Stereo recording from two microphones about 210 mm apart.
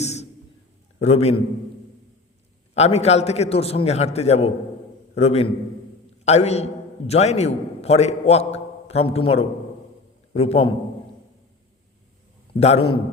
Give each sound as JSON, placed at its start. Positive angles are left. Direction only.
{"t": 0.0, "sound": "a sound", "side_deg": 30}
{"t": 0.9, "sound": "a man's voice", "side_deg": 30}
{"t": 2.7, "sound": "a man's voice", "side_deg": 30}
{"t": 12.5, "sound": "a man's voice", "side_deg": 30}